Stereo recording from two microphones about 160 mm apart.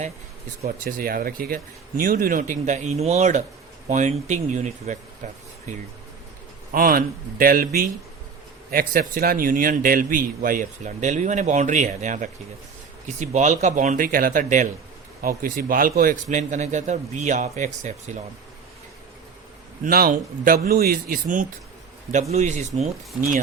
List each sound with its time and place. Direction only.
0.9 s a man's voice: 60° right (ahead or behind)
6.7 s a man's voice: 65° right (ahead or behind); by 18.2 s 45° right (ahead or behind)
19.8 s a man's voice: 65° right (ahead or behind)
22.3 s a man's voice: 45° right (ahead or behind)